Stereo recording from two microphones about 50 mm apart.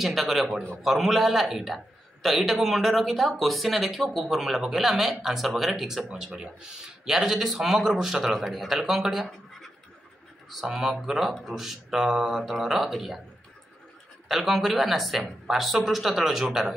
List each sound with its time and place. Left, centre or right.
0.0 s speech: centre
14.2 s speech: centre